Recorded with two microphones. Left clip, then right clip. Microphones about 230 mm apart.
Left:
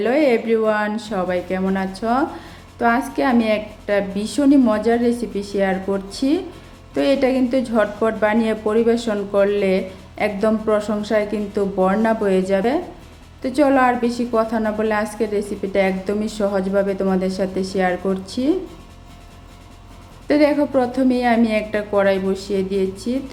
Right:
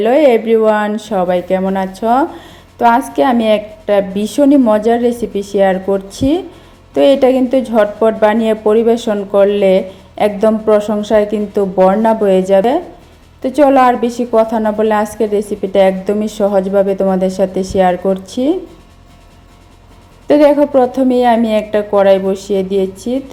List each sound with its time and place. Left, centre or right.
0.0 s a woman's voice: centre
20.2 s a woman's voice: centre